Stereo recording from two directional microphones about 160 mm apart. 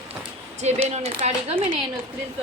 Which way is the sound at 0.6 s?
45° right (ahead or behind).